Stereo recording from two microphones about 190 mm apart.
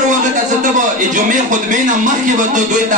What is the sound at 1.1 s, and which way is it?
Speech, 40° right (ahead or behind).